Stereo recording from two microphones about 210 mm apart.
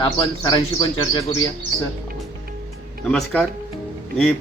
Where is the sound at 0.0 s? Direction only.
20° left (ahead or behind).